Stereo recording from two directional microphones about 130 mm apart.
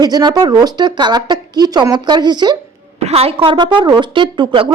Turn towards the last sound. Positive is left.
turn(degrees=-35)  # may be behind; listen again after turning